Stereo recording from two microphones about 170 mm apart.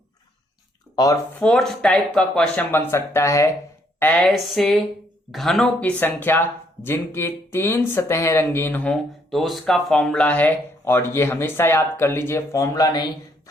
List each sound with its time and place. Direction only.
0.9 s speech: 20° left (ahead or behind)
1.4 s speech: 5° left (ahead or behind)
4.0 s speech: 5° left (ahead or behind); by 13.1 s 25° left (ahead or behind)